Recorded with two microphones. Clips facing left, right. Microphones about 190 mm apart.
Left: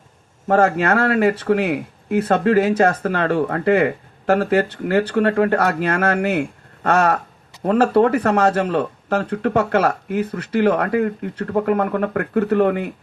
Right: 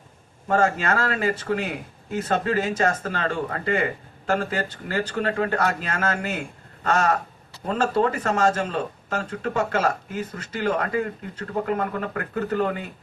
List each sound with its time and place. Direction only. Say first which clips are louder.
0.5 s speech: left 6 dB; 60° left (ahead or behind)